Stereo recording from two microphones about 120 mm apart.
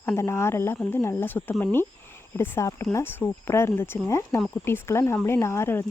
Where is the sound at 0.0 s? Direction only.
25° left (ahead or behind).